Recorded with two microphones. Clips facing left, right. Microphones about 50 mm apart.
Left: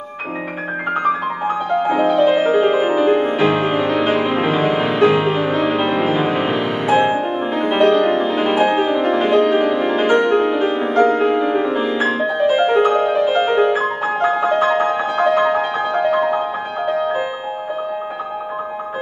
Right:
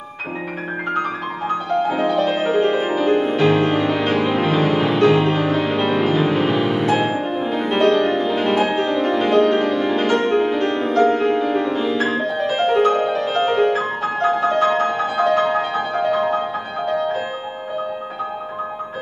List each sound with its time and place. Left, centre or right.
0.9 s music: centre